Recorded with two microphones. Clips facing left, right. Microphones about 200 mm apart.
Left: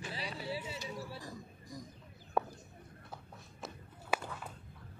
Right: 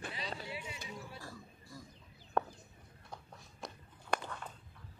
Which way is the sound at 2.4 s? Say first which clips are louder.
Left 1 dB; 5° left (ahead or behind).